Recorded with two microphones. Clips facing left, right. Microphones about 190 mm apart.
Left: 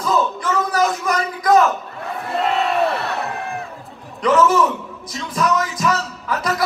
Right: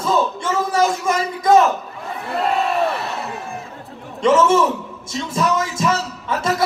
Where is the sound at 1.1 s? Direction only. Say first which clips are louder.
Right 1 dB; 25° right (ahead or behind).